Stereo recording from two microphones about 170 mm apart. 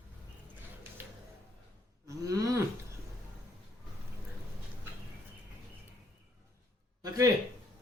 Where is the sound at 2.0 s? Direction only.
20° right (ahead or behind).